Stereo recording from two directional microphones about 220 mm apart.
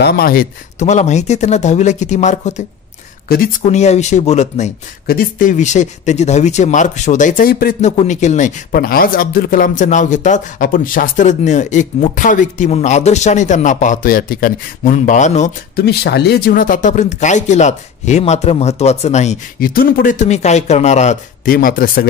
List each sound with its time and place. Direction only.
0.0 s speech: 40° left (ahead or behind)
3.6 s speech: 30° left (ahead or behind)
7.9 s speech: 30° left (ahead or behind)